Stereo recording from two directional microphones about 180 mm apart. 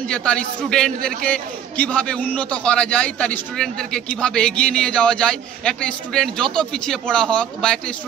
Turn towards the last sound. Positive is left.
turn(degrees=5)  # may be behind; listen again after turning